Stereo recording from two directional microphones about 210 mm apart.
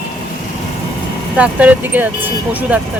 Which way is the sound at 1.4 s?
5° right (ahead or behind).